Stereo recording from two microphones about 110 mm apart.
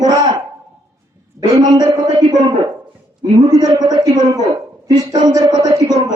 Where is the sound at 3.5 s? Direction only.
35° right (ahead or behind).